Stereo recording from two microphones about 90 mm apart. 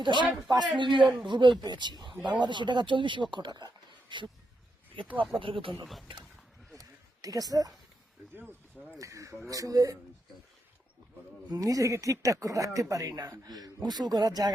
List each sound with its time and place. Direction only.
0.0 s speech: 60° right (ahead or behind)
5.4 s speech: 75° right (ahead or behind)
5.8 s speech: centre (ahead or behind)
6.7 s a sound: 40° right (ahead or behind)
9.0 s speech: 35° right (ahead or behind)
11.5 s speech: 40° right (ahead or behind)